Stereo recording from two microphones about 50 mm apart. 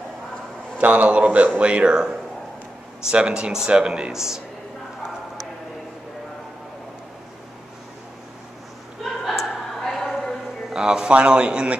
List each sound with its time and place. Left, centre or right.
0.7 s a man's voice: right; by 4.4 s centre
9.2 s a sound: centre
10.7 s a man's voice: centre